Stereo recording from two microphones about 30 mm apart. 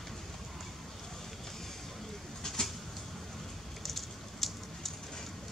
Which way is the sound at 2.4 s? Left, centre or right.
Left.